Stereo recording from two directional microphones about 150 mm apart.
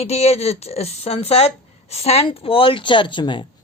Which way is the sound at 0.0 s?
45° left (ahead or behind).